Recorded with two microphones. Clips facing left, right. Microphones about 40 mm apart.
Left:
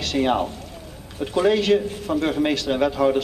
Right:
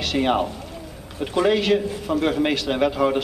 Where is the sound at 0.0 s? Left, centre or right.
Centre.